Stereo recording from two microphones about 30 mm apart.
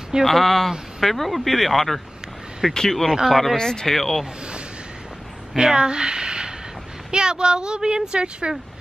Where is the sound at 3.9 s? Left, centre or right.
Centre.